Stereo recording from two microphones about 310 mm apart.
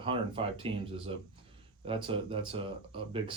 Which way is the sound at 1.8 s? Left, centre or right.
Centre.